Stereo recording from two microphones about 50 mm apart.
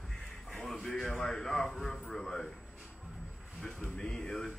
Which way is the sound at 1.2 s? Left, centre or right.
Centre.